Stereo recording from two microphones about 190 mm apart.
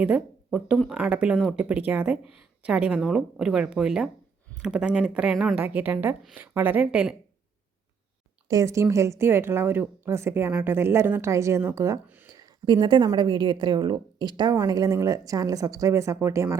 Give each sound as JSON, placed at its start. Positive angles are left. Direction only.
{"t": 0.0, "sound": "speech", "side_deg": -5}
{"t": 8.4, "sound": "speech", "side_deg": -15}